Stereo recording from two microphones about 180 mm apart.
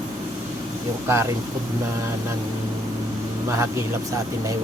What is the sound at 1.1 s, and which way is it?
Mantra, 15° right (ahead or behind).